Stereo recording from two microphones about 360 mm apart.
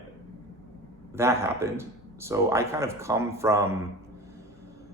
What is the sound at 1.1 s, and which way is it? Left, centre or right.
Speech, centre.